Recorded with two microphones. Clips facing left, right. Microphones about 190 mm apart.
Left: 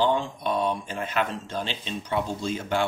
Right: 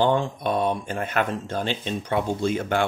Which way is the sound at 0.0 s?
55° right (ahead or behind).